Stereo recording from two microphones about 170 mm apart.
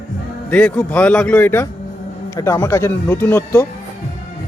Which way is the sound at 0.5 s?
10° left (ahead or behind).